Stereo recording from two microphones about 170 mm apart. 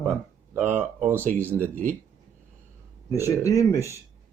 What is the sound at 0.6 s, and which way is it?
Speech, 45° right (ahead or behind).